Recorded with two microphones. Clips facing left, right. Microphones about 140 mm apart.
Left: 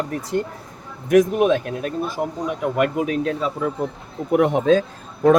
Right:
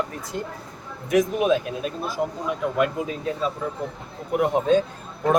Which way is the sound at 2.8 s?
75° left (ahead or behind).